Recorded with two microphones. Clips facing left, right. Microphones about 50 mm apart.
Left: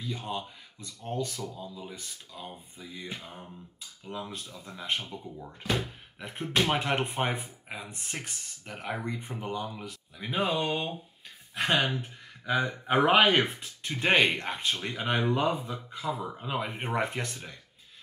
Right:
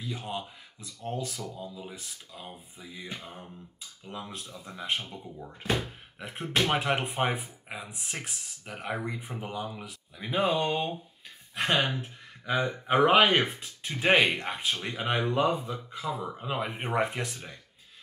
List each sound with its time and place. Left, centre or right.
0.0 s speech: centre
11.7 s speech: centre
12.0 s speech: centre